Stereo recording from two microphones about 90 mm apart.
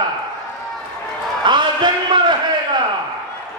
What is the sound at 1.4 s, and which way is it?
Speech, 55° right (ahead or behind).